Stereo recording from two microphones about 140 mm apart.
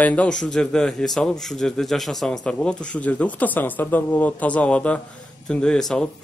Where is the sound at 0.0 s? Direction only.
10° left (ahead or behind).